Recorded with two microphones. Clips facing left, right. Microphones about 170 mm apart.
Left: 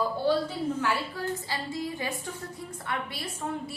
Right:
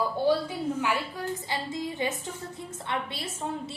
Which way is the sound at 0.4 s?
15° right (ahead or behind).